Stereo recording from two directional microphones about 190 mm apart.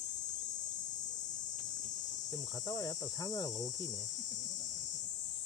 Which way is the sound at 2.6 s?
20° left (ahead or behind).